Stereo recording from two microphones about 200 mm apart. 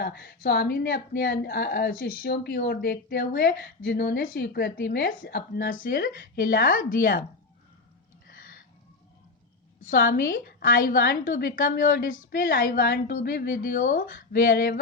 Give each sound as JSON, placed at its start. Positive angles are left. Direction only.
{"t": 0.0, "sound": "speech", "side_deg": 55}
{"t": 8.3, "sound": "a sound", "side_deg": 45}
{"t": 9.8, "sound": "speech", "side_deg": 45}